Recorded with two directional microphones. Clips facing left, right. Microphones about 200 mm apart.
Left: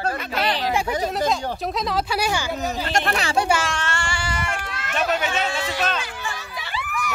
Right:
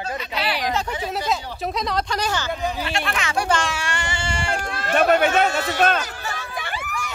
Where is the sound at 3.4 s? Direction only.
5° left (ahead or behind).